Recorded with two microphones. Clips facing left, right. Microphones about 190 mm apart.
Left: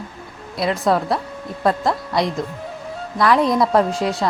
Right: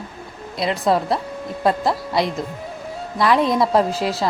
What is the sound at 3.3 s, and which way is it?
Speech, centre (ahead or behind).